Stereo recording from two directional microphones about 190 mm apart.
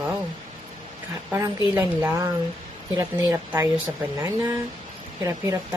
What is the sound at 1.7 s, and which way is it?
A woman's voice, 15° right (ahead or behind).